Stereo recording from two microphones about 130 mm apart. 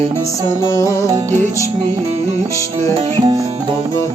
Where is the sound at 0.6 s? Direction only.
25° left (ahead or behind).